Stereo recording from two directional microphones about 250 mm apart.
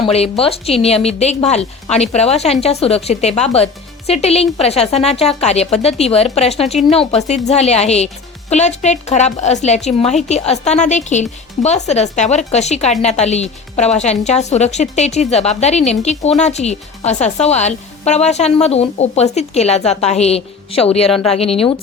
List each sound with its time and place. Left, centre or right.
0.0 s a woman's voice: left